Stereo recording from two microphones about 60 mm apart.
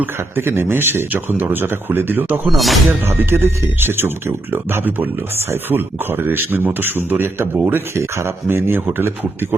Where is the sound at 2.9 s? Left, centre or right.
Right.